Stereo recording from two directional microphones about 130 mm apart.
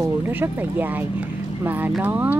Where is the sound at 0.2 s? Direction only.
15° right (ahead or behind).